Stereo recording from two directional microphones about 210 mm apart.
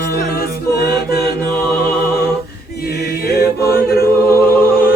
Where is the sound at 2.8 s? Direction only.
45° left (ahead or behind).